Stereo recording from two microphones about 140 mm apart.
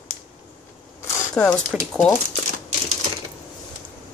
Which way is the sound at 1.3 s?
5° left (ahead or behind).